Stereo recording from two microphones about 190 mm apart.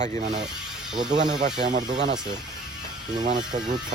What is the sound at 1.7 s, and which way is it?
Speech, 40° right (ahead or behind).